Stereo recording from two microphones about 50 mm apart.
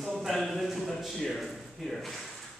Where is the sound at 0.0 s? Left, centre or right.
Centre.